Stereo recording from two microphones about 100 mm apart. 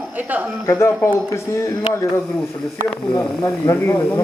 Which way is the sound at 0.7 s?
25° left (ahead or behind).